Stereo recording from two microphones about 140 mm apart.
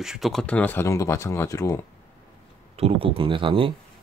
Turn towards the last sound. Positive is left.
turn(degrees=-40)  # may be behind; listen again after turning